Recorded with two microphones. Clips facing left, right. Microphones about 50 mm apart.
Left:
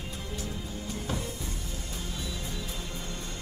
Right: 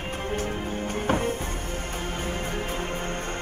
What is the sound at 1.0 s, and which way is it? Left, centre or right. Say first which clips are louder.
Music: right 12 dB; right.